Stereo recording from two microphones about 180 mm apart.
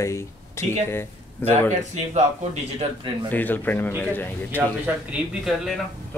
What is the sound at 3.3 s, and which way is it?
Speech, 10° left (ahead or behind).